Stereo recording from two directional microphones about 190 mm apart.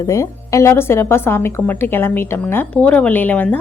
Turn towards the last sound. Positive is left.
turn(degrees=10)  # may be behind; listen again after turning